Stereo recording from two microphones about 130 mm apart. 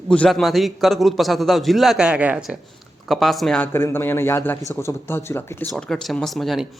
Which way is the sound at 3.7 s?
20° left (ahead or behind).